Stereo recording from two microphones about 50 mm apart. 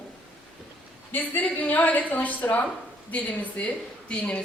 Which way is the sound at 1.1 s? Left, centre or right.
Left.